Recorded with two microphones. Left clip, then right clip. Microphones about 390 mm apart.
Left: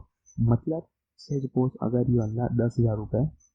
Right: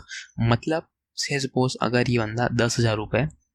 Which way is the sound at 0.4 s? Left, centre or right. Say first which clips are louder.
Right 5 dB; right.